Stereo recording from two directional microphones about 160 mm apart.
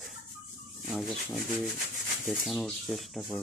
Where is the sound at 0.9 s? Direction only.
Centre (ahead or behind).